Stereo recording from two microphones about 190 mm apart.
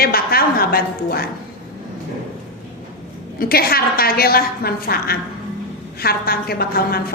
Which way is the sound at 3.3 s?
50° left (ahead or behind).